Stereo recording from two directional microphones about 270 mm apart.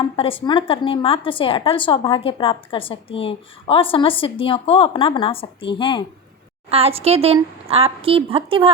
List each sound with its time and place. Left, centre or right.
0.2 s a woman's voice: centre
6.7 s a woman's voice: right